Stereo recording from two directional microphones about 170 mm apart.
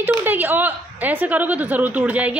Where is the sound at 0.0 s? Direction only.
10° right (ahead or behind).